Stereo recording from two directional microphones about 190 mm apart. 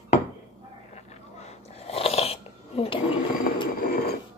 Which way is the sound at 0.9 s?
35° left (ahead or behind).